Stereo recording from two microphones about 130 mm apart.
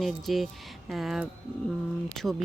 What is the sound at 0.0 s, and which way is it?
Speech, centre (ahead or behind).